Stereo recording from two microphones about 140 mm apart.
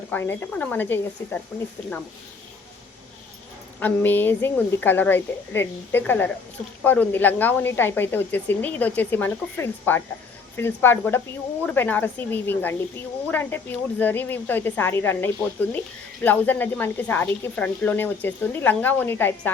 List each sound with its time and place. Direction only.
0.1 s speech: 15° left (ahead or behind)
3.8 s speech: 15° left (ahead or behind)